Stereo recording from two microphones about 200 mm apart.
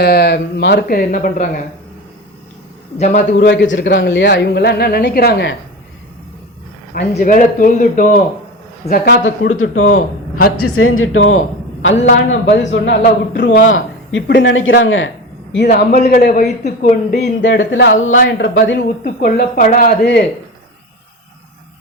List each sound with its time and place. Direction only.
0.0 s speech: 55° left (ahead or behind)
3.0 s a man's voice: 40° left (ahead or behind)
3.3 s speech: 60° left (ahead or behind)
7.2 s speech: 45° left (ahead or behind)
8.9 s speech: 55° left (ahead or behind)
9.6 s speech: 90° left
9.9 s a man's voice: 50° left (ahead or behind)
10.8 s speech: 90° left
11.8 s speech: 70° left (ahead or behind)
15.5 s speech: 55° left (ahead or behind)
17.4 s speech: 70° left (ahead or behind)
18.2 s speech: 55° left (ahead or behind)
19.0 s speech: 45° left (ahead or behind)